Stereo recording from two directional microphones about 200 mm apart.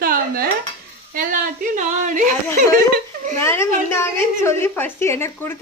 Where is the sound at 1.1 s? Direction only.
45° right (ahead or behind).